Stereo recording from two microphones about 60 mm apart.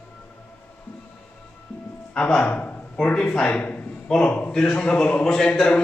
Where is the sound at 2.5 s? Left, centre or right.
Left.